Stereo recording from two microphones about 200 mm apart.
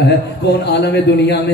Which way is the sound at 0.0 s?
55° left (ahead or behind).